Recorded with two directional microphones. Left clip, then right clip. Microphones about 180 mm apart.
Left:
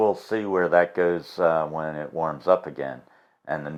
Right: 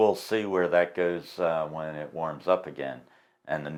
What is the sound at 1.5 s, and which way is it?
Speech, 45° left (ahead or behind).